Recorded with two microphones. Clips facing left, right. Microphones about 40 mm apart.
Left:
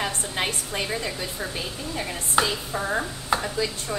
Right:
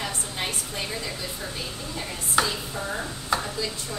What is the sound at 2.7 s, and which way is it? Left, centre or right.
Speech, left.